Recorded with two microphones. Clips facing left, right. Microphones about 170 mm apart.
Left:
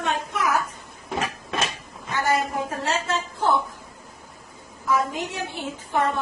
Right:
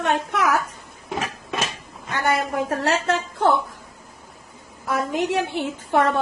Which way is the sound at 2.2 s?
70° right (ahead or behind).